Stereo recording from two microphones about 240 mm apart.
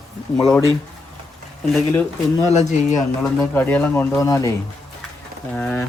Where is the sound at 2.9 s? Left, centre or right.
Centre.